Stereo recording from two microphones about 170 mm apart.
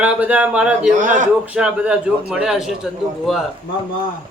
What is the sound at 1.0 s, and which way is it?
Speech, 50° right (ahead or behind).